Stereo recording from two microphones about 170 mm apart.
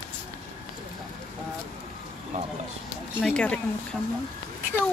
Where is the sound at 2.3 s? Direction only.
45° right (ahead or behind).